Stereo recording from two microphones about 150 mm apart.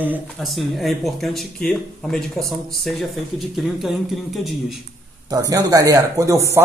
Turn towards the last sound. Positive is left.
turn(degrees=-20)  # may be behind; listen again after turning